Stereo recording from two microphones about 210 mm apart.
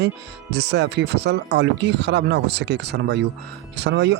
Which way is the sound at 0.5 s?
55° right (ahead or behind).